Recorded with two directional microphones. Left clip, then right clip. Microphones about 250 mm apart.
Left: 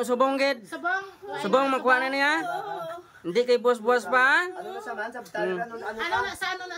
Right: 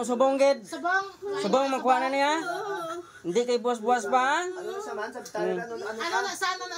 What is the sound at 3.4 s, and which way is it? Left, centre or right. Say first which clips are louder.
Speech: left 5 dB; centre.